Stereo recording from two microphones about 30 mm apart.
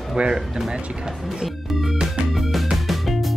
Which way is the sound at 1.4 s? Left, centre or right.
Centre.